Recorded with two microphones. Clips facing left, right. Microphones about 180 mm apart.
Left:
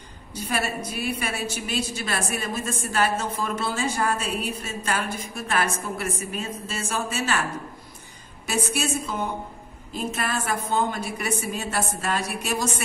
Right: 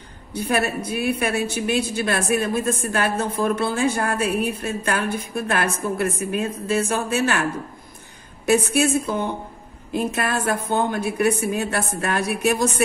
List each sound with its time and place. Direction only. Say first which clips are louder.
0.3 s a woman's voice: right 6 dB; 60° right (ahead or behind)
8.5 s a woman's voice: right 8 dB; 55° right (ahead or behind)